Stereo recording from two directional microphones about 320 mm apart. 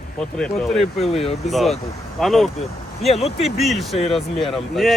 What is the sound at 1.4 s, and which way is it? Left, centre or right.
Speech, centre.